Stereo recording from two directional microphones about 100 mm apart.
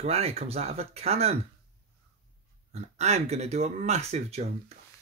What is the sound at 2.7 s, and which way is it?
Speech, 90° right.